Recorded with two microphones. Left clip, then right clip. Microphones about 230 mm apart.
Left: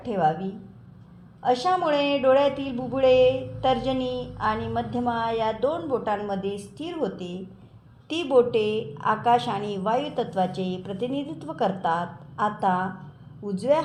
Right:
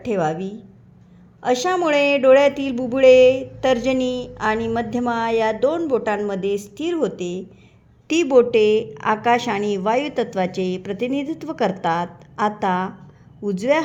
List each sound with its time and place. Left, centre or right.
0.0 s speech: right